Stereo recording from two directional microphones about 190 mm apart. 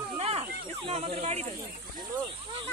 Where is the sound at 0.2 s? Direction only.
30° right (ahead or behind).